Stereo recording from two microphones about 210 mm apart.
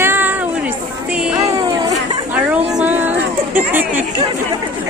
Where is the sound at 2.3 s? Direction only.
5° right (ahead or behind).